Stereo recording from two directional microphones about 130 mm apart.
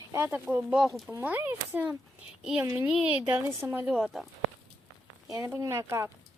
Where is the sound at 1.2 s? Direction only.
15° right (ahead or behind).